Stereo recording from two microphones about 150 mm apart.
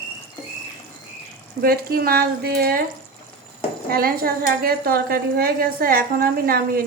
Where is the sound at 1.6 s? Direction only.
85° right.